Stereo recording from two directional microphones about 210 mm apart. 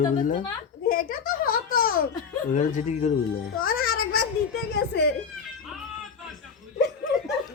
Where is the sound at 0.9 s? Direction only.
45° left (ahead or behind).